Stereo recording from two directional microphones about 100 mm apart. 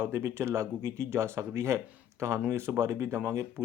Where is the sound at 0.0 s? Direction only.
25° right (ahead or behind).